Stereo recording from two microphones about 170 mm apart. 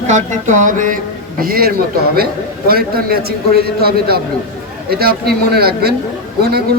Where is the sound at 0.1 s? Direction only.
45° right (ahead or behind).